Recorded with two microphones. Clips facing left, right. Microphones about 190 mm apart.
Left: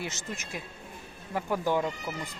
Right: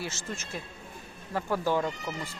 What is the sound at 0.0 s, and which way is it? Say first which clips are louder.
Speech: even; 20° left (ahead or behind).